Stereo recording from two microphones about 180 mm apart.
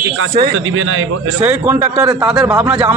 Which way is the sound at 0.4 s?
90° right.